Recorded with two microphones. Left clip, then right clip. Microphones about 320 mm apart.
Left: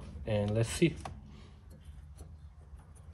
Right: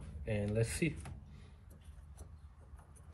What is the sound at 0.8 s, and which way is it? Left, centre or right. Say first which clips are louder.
Speech: left 8 dB; left.